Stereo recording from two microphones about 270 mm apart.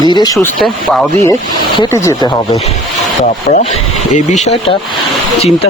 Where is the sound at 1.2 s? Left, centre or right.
Centre.